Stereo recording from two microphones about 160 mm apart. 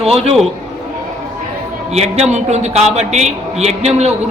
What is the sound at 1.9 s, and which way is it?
A man's voice, 45° right (ahead or behind).